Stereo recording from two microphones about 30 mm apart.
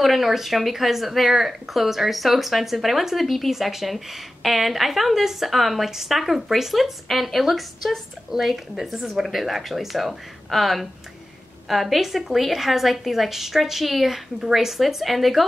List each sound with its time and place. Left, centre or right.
0.0 s speech: centre
8.3 s speech: centre